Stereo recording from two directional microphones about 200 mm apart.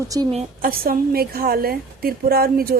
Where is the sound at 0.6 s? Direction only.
45° right (ahead or behind).